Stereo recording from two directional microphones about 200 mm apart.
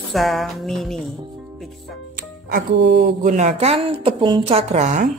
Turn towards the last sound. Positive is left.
turn(degrees=-40)  # may be behind; listen again after turning